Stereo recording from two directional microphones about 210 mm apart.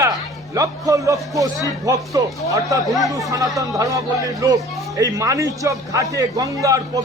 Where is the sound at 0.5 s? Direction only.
15° right (ahead or behind).